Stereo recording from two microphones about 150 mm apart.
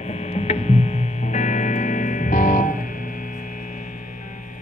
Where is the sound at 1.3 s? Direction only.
55° left (ahead or behind).